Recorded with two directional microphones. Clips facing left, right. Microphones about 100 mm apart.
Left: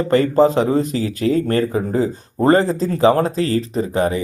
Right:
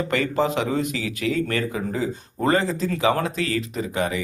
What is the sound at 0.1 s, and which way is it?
Speech, 35° left (ahead or behind).